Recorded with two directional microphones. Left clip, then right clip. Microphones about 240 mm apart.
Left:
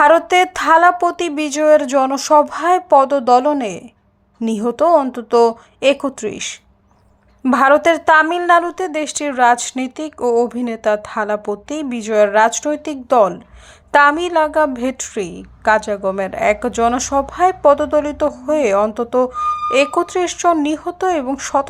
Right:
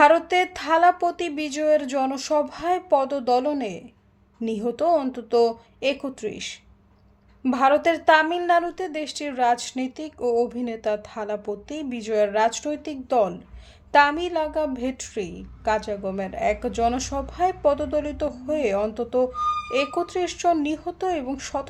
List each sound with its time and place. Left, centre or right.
0.0 s a woman's voice: centre